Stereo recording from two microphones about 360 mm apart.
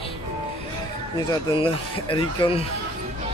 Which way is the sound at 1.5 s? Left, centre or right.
Centre.